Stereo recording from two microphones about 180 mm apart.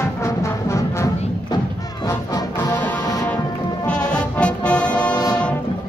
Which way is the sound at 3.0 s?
20° left (ahead or behind).